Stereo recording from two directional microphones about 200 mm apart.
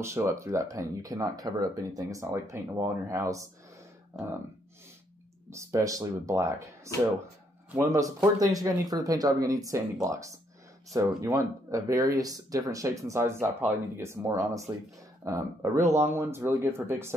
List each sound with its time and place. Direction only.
0.0 s speech: 15° right (ahead or behind)
5.5 s speech: 15° right (ahead or behind)